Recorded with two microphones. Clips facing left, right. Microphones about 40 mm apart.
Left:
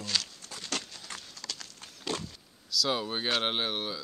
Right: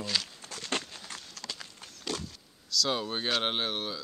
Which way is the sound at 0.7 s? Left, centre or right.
Right.